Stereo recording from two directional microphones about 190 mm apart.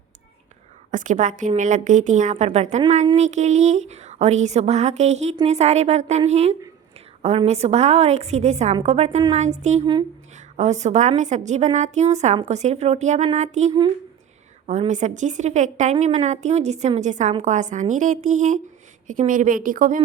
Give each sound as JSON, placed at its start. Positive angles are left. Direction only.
{"t": 0.9, "sound": "a woman's voice", "side_deg": -40}